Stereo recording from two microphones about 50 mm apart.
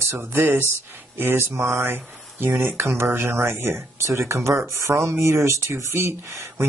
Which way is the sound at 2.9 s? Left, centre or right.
Right.